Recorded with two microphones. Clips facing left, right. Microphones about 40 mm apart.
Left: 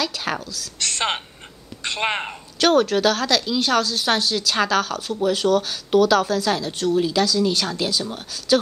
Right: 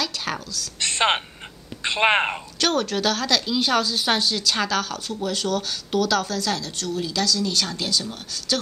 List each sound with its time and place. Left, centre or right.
0.0 s a woman's voice: centre
0.7 s a woman's voice: centre
2.6 s a woman's voice: centre